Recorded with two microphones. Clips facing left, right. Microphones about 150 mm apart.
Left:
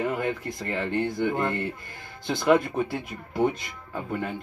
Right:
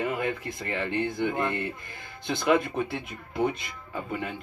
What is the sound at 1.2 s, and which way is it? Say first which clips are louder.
Speech: left 2 dB; centre (ahead or behind).